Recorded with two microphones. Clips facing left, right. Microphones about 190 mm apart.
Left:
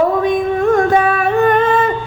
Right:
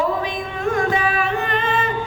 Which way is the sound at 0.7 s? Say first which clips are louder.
Left 7 dB; 55° left (ahead or behind).